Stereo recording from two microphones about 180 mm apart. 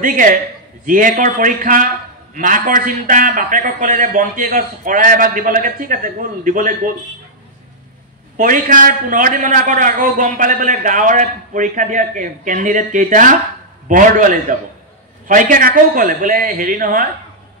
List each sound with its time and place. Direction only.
0.0 s a man's voice: 50° right (ahead or behind)
8.4 s a man's voice: 45° right (ahead or behind)